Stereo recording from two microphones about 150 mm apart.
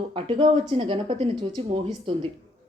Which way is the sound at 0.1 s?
35° right (ahead or behind).